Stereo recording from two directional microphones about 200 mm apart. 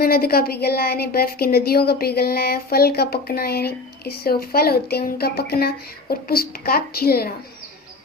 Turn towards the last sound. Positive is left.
turn(degrees=50)  # may be behind; listen again after turning